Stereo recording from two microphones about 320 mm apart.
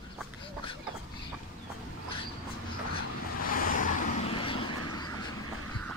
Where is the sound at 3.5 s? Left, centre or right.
Left.